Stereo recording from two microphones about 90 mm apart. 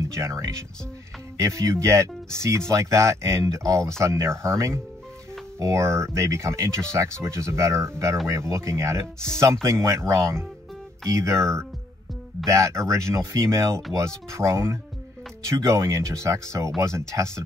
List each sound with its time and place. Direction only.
0.1 s speech: 35° right (ahead or behind)